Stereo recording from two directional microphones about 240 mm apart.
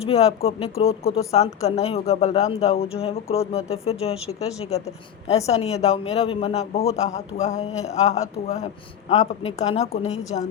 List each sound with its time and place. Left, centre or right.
0.1 s speech: left
5.5 s speech: left